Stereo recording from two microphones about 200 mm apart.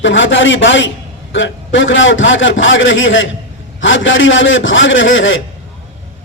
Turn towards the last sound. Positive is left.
turn(degrees=70)  # may be behind; listen again after turning